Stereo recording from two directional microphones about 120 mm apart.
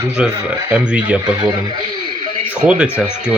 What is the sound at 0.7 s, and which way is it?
Speech, 10° right (ahead or behind).